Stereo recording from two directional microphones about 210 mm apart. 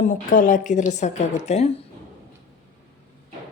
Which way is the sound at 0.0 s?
40° left (ahead or behind).